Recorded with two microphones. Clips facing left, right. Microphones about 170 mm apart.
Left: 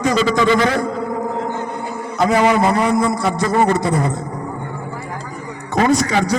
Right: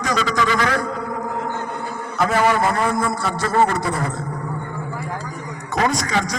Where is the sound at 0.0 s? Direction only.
25° left (ahead or behind).